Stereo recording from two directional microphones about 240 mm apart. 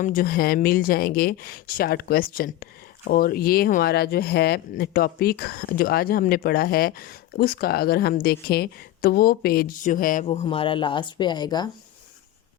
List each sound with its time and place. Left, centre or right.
0.0 s speech: left; by 11.7 s centre